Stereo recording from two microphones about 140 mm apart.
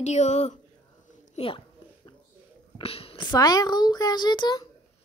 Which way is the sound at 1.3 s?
40° left (ahead or behind).